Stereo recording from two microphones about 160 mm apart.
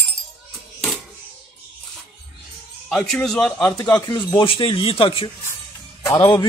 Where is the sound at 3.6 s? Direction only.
25° left (ahead or behind).